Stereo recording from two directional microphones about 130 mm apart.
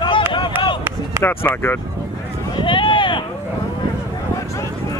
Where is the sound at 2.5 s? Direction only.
40° left (ahead or behind).